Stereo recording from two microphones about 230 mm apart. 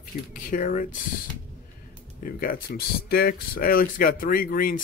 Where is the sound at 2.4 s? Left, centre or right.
Left.